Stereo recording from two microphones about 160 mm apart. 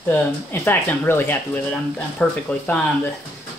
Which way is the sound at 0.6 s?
15° left (ahead or behind).